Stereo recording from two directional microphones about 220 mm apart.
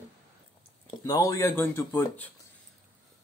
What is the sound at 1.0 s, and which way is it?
Speech, 15° left (ahead or behind).